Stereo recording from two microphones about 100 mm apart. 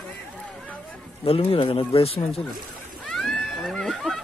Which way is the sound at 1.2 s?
70° left (ahead or behind).